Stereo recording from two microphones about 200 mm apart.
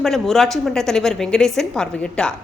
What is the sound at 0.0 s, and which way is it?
A woman's voice, centre (ahead or behind).